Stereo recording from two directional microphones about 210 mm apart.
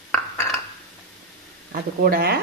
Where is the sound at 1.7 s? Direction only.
45° right (ahead or behind).